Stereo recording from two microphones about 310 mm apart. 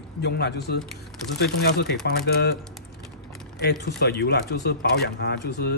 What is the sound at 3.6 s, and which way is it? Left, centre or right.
Speech, left.